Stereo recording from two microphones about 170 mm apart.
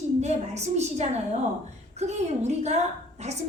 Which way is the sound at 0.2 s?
40° right (ahead or behind).